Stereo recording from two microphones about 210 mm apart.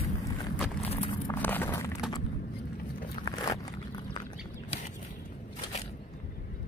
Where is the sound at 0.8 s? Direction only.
30° left (ahead or behind).